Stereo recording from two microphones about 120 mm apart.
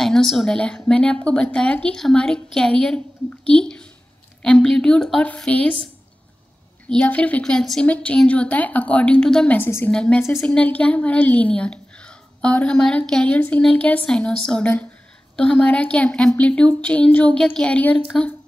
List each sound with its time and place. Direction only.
0.0 s a woman's voice: 5° left (ahead or behind)
6.9 s a woman's voice: 10° left (ahead or behind)
9.6 s a woman's voice: 20° left (ahead or behind)
9.8 s a woman's voice: 10° left (ahead or behind)